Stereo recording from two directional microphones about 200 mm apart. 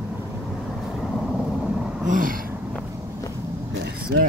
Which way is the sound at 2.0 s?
40° right (ahead or behind).